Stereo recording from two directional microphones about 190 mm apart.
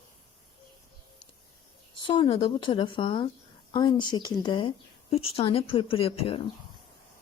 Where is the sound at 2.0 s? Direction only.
25° left (ahead or behind).